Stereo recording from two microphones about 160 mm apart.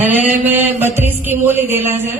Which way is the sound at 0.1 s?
10° right (ahead or behind).